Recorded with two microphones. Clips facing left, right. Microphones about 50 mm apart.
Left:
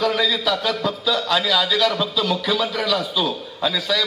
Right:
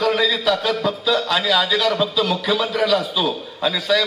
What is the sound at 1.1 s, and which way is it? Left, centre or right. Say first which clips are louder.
A man's voice: even; centre.